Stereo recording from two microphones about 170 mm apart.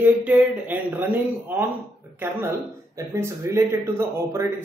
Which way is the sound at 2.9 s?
15° right (ahead or behind).